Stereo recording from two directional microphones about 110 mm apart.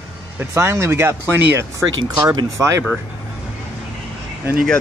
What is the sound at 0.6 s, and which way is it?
Speech, 25° right (ahead or behind).